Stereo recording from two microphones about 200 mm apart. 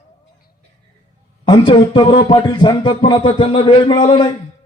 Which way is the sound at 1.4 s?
25° left (ahead or behind).